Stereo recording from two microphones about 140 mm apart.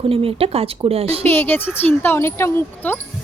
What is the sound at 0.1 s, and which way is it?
Speech, 45° right (ahead or behind).